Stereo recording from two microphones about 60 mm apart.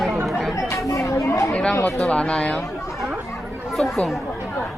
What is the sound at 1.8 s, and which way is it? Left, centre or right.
Speech, left.